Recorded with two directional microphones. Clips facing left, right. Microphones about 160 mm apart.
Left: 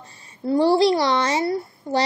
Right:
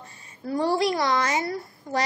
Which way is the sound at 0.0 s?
35° left (ahead or behind).